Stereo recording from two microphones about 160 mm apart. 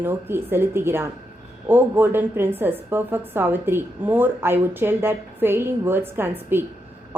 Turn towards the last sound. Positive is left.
turn(degrees=-15)  # may be behind; listen again after turning